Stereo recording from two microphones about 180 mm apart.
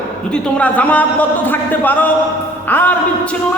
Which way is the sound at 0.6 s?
10° left (ahead or behind).